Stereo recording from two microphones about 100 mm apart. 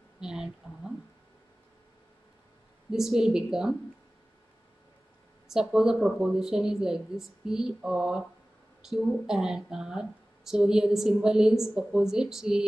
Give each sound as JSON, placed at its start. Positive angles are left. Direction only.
{"t": 0.2, "sound": "speech", "side_deg": -5}
{"t": 2.9, "sound": "speech", "side_deg": -5}
{"t": 5.5, "sound": "speech", "side_deg": -5}